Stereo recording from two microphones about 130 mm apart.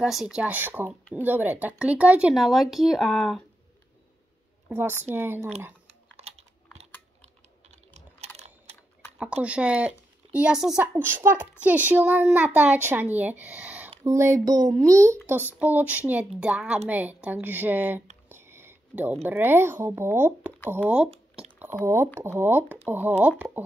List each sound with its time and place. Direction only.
0.0 s speech: 5° right (ahead or behind)
5.1 s speech: 15° right (ahead or behind)
6.1 s computer keyboard: 55° right (ahead or behind)
8.4 s typing: 55° right (ahead or behind)
9.2 s a woman's voice: 10° right (ahead or behind)
10.8 s speech: 15° right (ahead or behind)
14.0 s speech: 20° right (ahead or behind)
15.6 s speech: 15° right (ahead or behind)
18.3 s a sound: 20° right (ahead or behind)
19.2 s speech: 15° right (ahead or behind)
21.8 s speech: 20° right (ahead or behind)